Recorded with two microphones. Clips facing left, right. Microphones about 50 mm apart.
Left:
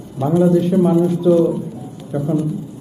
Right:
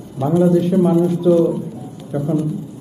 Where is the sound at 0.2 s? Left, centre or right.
Centre.